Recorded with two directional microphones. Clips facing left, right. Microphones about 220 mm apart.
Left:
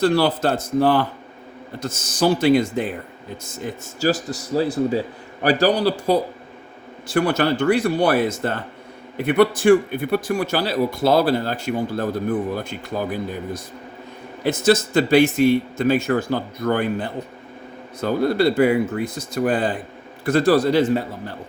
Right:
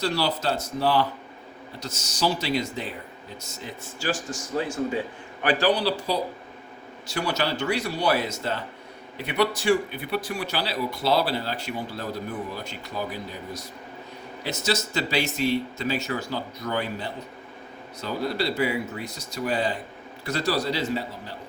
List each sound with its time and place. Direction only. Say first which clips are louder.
0.0 s a man's voice: left 8 dB; 55° left (ahead or behind)